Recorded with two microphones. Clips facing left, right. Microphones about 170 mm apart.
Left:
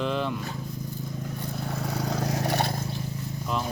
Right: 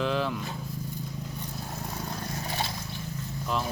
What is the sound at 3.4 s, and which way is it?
Speech, centre (ahead or behind).